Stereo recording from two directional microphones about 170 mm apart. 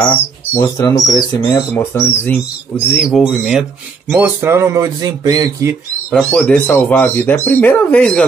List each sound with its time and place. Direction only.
0.6 s speech: 20° left (ahead or behind)
2.9 s speech: centre (ahead or behind); by 5.8 s 20° right (ahead or behind)
6.0 s speech: 5° left (ahead or behind)